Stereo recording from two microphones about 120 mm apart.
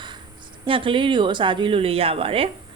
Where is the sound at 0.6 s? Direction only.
45° right (ahead or behind).